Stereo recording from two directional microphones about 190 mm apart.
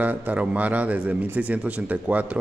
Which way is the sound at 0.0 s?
10° right (ahead or behind).